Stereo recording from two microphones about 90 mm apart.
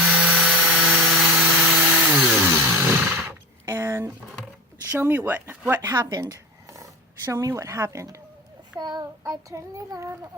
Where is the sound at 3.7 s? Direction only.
30° right (ahead or behind).